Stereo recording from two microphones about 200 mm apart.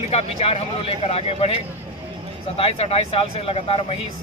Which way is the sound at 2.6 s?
30° left (ahead or behind).